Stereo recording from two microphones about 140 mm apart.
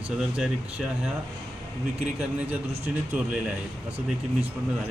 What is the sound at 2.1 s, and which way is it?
Speech, 10° right (ahead or behind).